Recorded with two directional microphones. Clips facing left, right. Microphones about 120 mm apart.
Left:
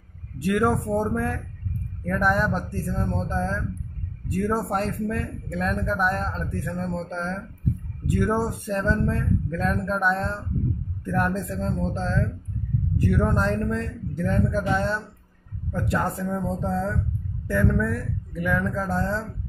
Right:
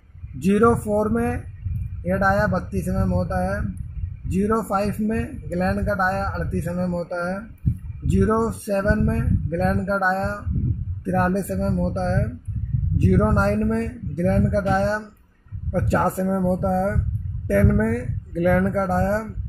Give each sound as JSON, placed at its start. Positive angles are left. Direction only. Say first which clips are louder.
{"t": 0.4, "sound": "speech", "louder": "right 5 dB", "side_deg": -30}